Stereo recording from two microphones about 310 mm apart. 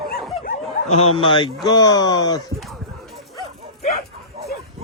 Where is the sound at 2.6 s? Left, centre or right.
Centre.